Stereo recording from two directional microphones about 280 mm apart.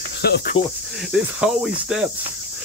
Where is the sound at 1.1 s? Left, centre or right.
Centre.